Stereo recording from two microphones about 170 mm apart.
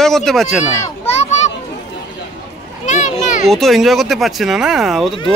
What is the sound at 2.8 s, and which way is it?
Children playing, 45° left (ahead or behind).